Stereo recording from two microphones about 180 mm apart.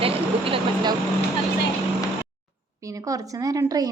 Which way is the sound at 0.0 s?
30° right (ahead or behind).